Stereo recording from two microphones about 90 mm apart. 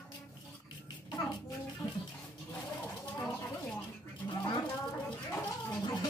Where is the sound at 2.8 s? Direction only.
15° left (ahead or behind).